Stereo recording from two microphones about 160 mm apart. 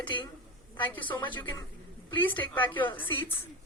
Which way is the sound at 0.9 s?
30° left (ahead or behind).